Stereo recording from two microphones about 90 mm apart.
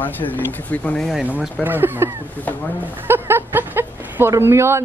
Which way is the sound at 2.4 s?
20° left (ahead or behind).